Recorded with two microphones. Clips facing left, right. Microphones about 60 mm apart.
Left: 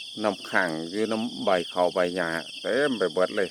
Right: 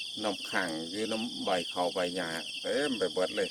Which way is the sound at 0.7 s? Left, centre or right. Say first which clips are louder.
Left 6 dB; left.